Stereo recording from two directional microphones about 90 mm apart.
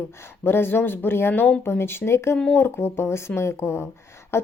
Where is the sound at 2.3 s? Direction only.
10° left (ahead or behind).